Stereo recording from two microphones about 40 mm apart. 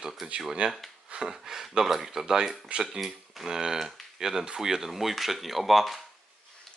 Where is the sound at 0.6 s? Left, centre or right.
Right.